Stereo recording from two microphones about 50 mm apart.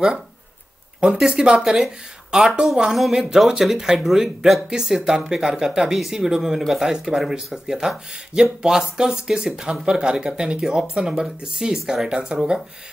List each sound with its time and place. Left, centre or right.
1.0 s speech: centre